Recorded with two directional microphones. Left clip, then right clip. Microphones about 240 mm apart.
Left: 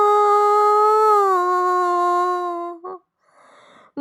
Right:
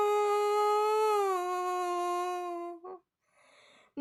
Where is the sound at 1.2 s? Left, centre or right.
Centre.